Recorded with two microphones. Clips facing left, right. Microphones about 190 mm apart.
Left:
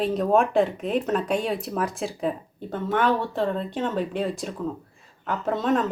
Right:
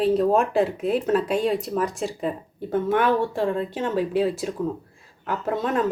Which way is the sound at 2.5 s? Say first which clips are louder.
Right 4 dB; 10° right (ahead or behind).